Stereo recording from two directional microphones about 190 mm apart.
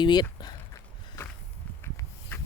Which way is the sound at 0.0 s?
20° left (ahead or behind).